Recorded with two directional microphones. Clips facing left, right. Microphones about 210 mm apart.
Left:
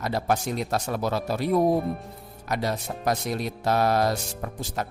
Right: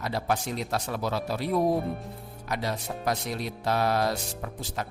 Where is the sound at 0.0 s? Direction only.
45° left (ahead or behind).